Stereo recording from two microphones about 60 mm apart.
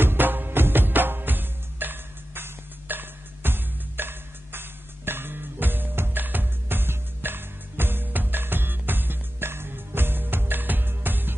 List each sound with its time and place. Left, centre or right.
0.0 s music: right